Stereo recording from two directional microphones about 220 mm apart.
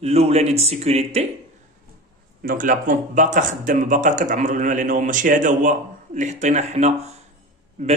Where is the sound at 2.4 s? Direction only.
40° right (ahead or behind).